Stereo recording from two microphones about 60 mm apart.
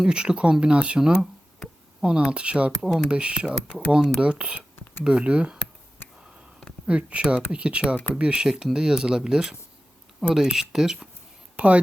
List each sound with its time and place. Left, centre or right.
0.0 s speech: centre
6.0 s a sound: left
6.8 s speech: centre
11.5 s speech: right